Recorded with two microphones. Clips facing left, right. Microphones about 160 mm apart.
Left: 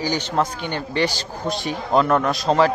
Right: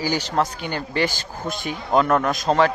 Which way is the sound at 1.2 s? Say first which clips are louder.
Left 3 dB; 50° right (ahead or behind).